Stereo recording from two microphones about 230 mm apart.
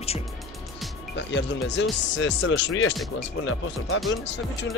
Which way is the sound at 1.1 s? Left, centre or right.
Left.